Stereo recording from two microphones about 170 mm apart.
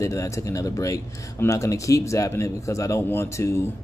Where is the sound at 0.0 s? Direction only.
20° left (ahead or behind).